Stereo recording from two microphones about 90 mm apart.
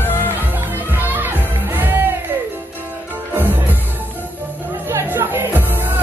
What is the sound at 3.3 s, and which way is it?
Music, 20° right (ahead or behind).